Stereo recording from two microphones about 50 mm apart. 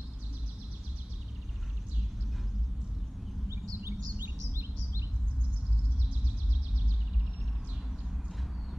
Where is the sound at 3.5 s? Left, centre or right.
Right.